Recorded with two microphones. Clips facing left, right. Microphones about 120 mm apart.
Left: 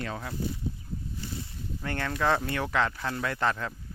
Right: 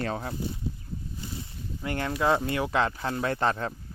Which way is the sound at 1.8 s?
20° right (ahead or behind).